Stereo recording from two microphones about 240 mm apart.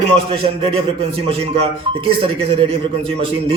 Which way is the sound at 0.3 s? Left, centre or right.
Right.